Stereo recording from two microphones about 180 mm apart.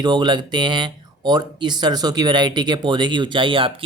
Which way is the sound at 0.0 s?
25° right (ahead or behind).